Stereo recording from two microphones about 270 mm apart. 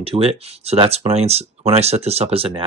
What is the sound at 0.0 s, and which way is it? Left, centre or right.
Speech, right.